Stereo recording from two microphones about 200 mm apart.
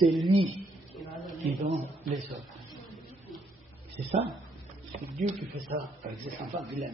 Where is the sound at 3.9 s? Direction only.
30° right (ahead or behind).